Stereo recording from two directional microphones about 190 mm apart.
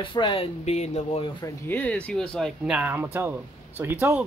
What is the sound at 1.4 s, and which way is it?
Speech, 10° left (ahead or behind).